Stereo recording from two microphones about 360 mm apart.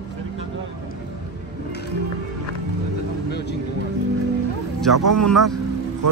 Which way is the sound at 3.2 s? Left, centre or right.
Left.